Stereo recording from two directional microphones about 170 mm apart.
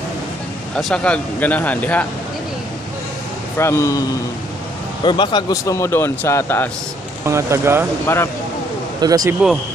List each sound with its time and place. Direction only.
0.7 s speech: 5° left (ahead or behind)
3.5 s speech: 15° left (ahead or behind)
5.0 s speech: 25° left (ahead or behind)
7.2 s speech: 15° right (ahead or behind)
8.1 s speech: 15° left (ahead or behind)
9.0 s speech: 20° right (ahead or behind)